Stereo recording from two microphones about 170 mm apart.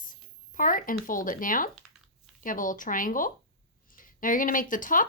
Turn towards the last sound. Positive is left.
turn(degrees=50)  # may be behind; listen again after turning